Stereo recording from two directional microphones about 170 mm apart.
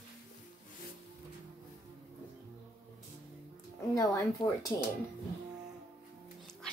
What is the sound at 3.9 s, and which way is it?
Speech, 20° left (ahead or behind).